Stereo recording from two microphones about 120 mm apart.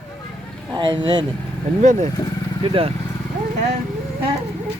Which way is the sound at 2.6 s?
50° right (ahead or behind).